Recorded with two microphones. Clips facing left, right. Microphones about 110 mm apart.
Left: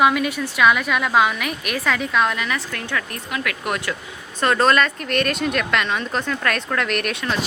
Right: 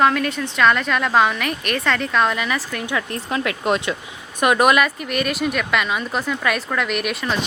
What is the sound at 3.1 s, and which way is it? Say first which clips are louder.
Speech: right 4 dB; 25° right (ahead or behind).